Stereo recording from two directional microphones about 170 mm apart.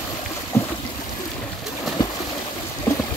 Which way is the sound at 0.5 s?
15° left (ahead or behind).